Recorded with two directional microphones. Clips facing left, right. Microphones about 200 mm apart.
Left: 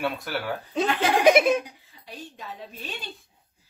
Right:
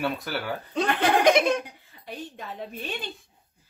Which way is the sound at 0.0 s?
Centre (ahead or behind).